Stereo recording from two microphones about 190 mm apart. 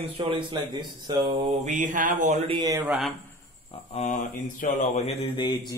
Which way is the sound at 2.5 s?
20° right (ahead or behind).